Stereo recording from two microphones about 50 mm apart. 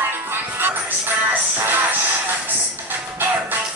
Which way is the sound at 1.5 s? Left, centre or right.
Right.